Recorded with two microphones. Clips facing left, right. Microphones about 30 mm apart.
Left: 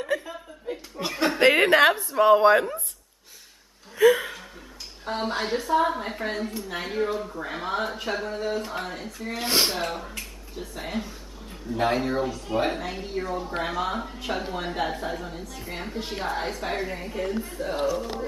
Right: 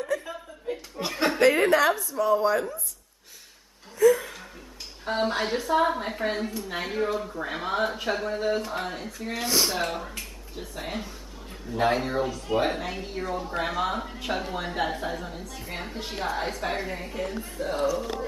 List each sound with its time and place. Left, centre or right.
0.2 s chuckle: centre
1.4 s a woman's voice: left
4.0 s speech: left
5.0 s a woman's voice: centre
9.5 s speech: left
9.8 s a woman's voice: centre
17.7 s speech: centre